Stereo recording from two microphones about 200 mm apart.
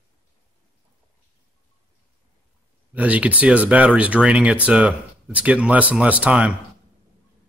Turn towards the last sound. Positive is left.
turn(degrees=-5)  # may be behind; listen again after turning